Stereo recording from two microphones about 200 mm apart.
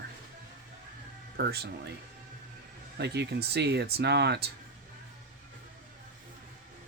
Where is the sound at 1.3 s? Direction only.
55° right (ahead or behind).